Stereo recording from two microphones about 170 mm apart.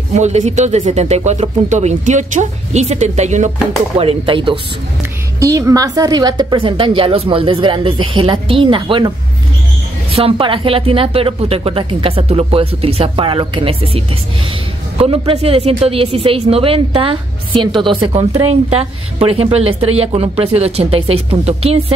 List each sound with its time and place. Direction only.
0.1 s a woman's voice: 40° right (ahead or behind)
4.0 s a woman's voice: 35° right (ahead or behind)
5.4 s a woman's voice: 20° right (ahead or behind)
10.1 s a woman's voice: 35° right (ahead or behind)